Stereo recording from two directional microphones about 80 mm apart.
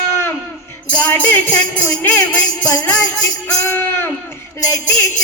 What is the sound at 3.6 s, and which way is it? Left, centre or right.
Music, left.